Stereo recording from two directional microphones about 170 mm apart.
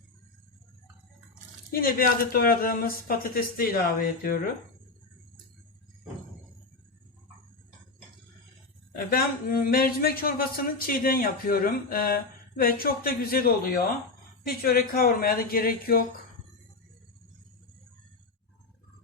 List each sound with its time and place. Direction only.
1.7 s a man's voice: 60° left (ahead or behind)
8.9 s a man's voice: 60° left (ahead or behind)